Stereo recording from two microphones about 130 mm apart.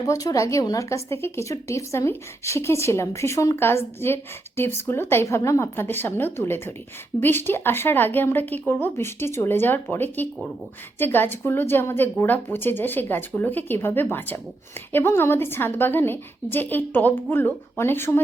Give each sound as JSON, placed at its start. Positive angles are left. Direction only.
{"t": 0.0, "sound": "a woman's voice", "side_deg": 25}